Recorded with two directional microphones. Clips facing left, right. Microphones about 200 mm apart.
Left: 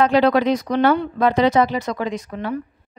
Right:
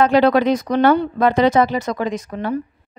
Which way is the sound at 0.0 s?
50° right (ahead or behind).